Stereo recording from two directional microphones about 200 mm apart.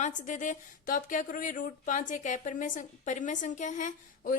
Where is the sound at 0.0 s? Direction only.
40° left (ahead or behind).